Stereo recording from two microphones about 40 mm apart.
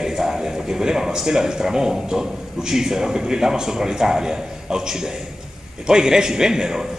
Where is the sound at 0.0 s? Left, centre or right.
Centre.